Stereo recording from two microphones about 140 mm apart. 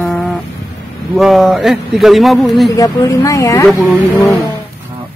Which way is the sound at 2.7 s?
25° left (ahead or behind).